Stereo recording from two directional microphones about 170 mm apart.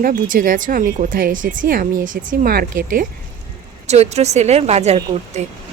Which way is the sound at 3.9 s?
40° right (ahead or behind).